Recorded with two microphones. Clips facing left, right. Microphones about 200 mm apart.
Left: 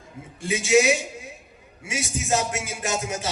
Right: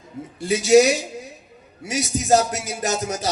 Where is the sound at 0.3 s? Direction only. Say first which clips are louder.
Right 6 dB; 40° right (ahead or behind).